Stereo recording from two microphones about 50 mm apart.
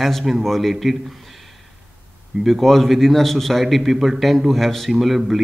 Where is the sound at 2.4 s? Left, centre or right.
Centre.